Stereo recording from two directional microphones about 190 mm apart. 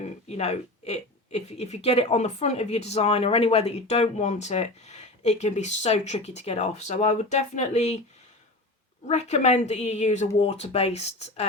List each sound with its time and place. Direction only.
0.0 s speech: 35° left (ahead or behind)
9.0 s speech: 35° left (ahead or behind)